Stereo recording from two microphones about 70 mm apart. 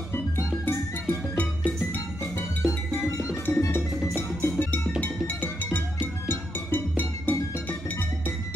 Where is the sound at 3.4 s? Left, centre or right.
Left.